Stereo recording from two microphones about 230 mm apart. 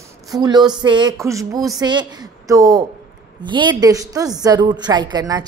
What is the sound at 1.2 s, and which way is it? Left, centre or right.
A woman's voice, centre.